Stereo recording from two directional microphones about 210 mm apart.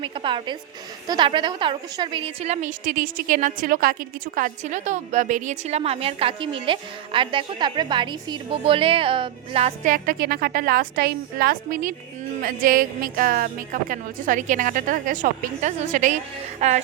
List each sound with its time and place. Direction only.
0.0 s a woman's voice: 25° right (ahead or behind)